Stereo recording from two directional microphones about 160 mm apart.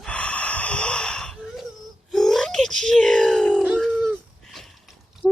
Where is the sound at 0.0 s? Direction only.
5° left (ahead or behind).